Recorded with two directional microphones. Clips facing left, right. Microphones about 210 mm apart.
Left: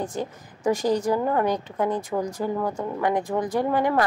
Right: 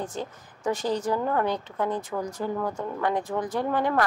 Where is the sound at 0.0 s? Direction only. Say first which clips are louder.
Left 4 dB; 10° left (ahead or behind).